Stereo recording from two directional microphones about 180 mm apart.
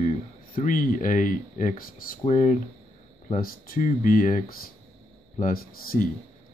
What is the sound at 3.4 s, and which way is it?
Speech, 50° left (ahead or behind).